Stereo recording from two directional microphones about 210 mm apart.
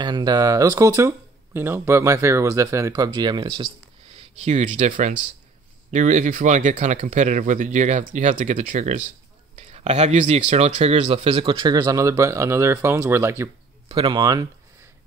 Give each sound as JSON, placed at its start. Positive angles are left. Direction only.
{"t": 0.0, "sound": "speech", "side_deg": -20}
{"t": 13.8, "sound": "speech", "side_deg": -25}